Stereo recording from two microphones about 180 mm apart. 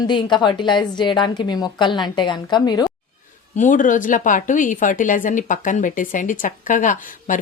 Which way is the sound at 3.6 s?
45° left (ahead or behind).